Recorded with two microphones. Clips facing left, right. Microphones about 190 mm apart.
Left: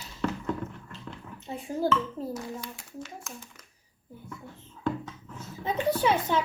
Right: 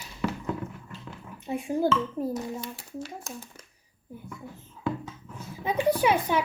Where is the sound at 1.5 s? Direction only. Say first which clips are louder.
Right 3 dB; 15° right (ahead or behind).